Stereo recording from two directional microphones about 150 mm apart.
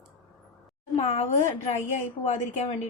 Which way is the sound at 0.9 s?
45° left (ahead or behind).